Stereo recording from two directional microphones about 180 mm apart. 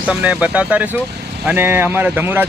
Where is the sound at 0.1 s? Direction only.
5° right (ahead or behind).